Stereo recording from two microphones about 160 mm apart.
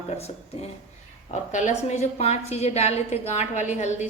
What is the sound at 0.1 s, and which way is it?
A woman's voice, 40° left (ahead or behind).